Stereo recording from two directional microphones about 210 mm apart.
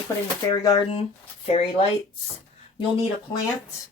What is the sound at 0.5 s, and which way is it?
Speech, 20° left (ahead or behind).